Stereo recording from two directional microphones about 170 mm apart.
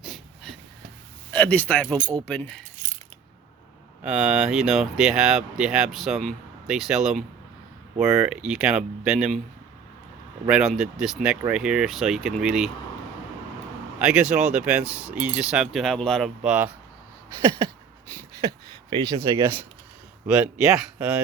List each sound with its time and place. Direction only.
0.0 s a sound: centre (ahead or behind)
1.3 s a man's voice: 10° left (ahead or behind)
2.0 s speech: 30° right (ahead or behind)
2.2 s a man's voice: 10° left (ahead or behind)
4.0 s speech: 5° right (ahead or behind)
10.4 s speech: 5° right (ahead or behind)
14.0 s speech: 5° right (ahead or behind)
18.3 s speech: 25° right (ahead or behind)